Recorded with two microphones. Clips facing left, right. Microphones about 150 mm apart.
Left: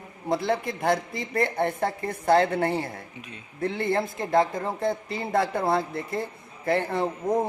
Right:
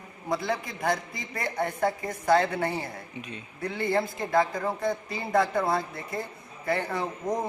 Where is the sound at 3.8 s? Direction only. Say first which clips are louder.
Right 3 dB; 25° left (ahead or behind).